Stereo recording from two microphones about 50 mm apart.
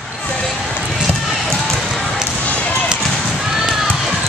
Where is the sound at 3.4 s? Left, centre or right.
Centre.